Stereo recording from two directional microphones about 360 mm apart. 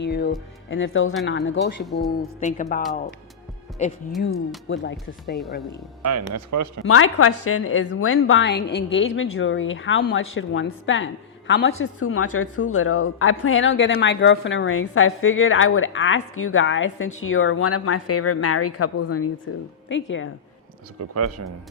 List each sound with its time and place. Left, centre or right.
0.0 s speech: left
1.8 s a woman's voice: centre
2.0 s speech: left
4.7 s speech: left
5.2 s a woman's voice: centre
6.1 s speech: right
6.8 s speech: left
21.0 s speech: right